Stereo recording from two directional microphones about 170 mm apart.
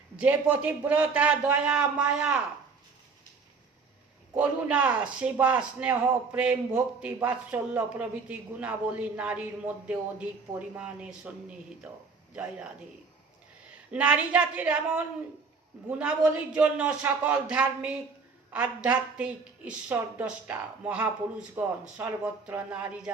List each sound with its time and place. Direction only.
0.2 s a man's voice: 10° right (ahead or behind)
4.4 s a man's voice: 10° right (ahead or behind)
12.3 s a man's voice: 5° right (ahead or behind)
13.9 s a man's voice: 5° right (ahead or behind)